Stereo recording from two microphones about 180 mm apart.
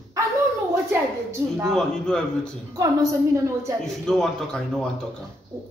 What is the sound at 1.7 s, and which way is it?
Speech, 5° left (ahead or behind).